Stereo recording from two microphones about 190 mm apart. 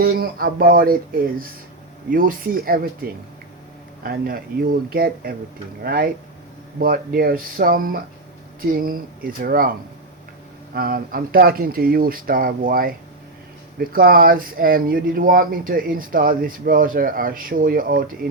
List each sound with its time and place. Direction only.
0.0 s speech: 50° right (ahead or behind)
10.8 s speech: 50° right (ahead or behind)